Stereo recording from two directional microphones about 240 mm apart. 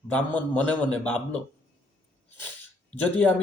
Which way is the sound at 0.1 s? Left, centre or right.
Centre.